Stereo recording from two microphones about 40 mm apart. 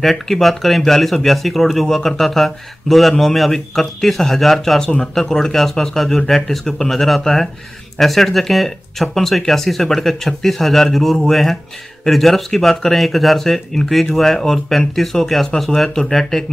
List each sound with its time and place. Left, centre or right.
0.0 s speech: centre
4.7 s speech: centre
15.9 s speech: centre